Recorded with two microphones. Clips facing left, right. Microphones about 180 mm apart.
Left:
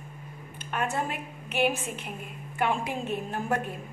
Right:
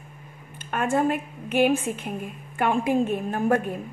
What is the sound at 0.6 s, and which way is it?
A woman's voice, 50° right (ahead or behind).